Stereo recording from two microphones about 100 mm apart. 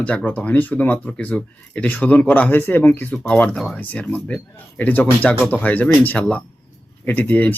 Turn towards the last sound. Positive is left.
turn(degrees=15)  # may be behind; listen again after turning